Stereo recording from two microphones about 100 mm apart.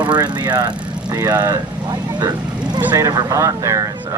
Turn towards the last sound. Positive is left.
turn(degrees=-35)  # may be behind; listen again after turning